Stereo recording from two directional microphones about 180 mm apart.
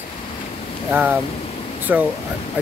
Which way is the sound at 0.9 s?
10° right (ahead or behind).